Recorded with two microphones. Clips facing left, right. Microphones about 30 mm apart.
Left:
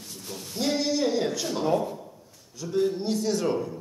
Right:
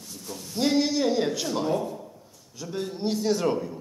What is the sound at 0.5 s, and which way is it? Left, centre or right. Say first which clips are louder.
A man's voice: right 2 dB; centre.